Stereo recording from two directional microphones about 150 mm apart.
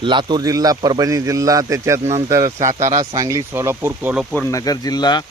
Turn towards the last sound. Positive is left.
turn(degrees=30)  # may be behind; listen again after turning